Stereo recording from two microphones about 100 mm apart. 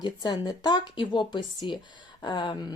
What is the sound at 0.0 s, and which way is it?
Speech, 45° left (ahead or behind).